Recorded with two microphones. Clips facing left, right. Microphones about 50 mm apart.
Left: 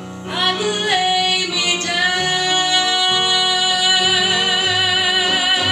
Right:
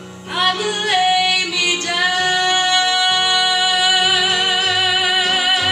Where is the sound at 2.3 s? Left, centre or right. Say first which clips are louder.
Right 2 dB; centre.